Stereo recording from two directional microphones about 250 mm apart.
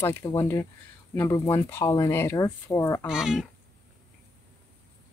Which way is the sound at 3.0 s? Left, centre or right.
Centre.